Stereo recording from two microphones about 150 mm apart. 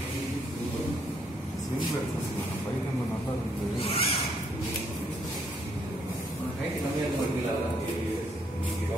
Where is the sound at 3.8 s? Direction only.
40° left (ahead or behind).